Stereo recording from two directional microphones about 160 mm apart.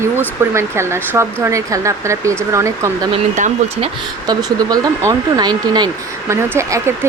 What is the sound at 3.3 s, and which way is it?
Speech, 45° right (ahead or behind).